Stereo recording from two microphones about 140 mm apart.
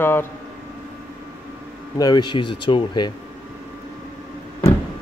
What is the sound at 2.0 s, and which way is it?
Speech, 30° left (ahead or behind).